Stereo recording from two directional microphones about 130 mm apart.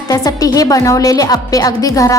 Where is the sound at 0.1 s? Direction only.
30° left (ahead or behind).